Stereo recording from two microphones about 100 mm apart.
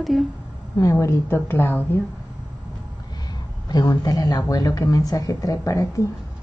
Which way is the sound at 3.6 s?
40° left (ahead or behind).